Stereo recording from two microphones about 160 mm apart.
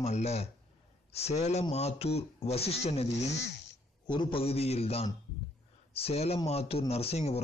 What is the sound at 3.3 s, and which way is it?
Speech, 90° left.